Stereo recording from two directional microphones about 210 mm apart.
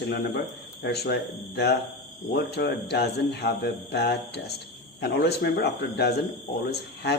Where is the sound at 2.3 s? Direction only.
50° left (ahead or behind).